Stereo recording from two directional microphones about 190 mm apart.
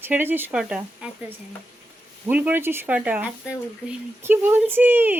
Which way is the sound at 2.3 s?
10° right (ahead or behind).